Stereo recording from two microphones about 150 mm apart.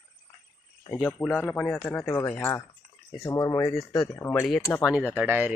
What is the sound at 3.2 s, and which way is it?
Cutlery, 20° left (ahead or behind).